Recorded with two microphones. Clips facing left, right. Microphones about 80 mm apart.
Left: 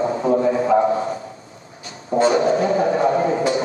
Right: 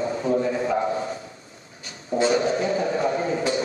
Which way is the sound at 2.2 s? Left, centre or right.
Left.